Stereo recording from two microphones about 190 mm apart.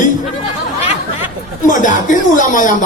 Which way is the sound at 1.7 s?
40° left (ahead or behind).